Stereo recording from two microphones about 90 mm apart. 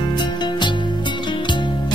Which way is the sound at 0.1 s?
55° left (ahead or behind).